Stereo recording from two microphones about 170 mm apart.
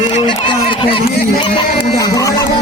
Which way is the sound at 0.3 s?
30° left (ahead or behind).